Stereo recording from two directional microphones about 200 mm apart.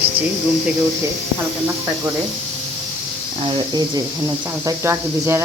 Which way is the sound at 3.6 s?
20° right (ahead or behind).